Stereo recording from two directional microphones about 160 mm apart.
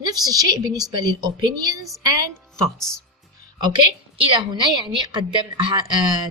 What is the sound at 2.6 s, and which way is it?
Speech, 5° left (ahead or behind).